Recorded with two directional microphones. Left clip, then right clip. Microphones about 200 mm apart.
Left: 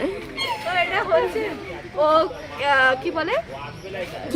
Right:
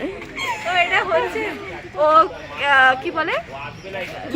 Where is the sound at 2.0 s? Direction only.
10° left (ahead or behind).